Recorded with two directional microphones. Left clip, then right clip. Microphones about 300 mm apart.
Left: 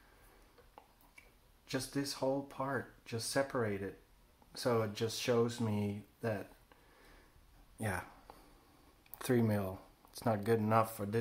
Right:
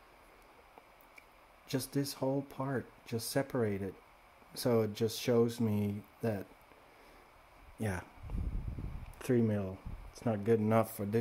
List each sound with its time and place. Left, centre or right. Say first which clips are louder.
1.7 s speech: right 2 dB; right
9.2 s speech: right 1 dB; centre